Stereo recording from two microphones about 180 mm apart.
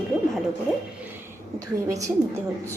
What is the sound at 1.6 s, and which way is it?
Speech, 20° right (ahead or behind).